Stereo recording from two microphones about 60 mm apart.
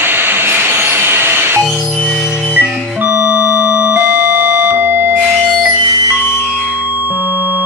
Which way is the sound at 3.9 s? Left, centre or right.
Right.